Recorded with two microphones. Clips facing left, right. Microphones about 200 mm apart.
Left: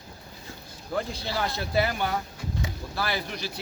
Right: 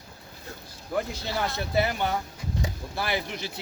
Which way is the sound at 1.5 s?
20° right (ahead or behind).